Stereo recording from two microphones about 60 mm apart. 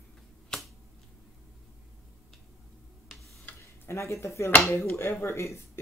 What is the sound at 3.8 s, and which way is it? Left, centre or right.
Speech, left.